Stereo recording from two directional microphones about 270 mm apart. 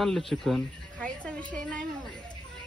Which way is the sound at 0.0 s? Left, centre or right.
Centre.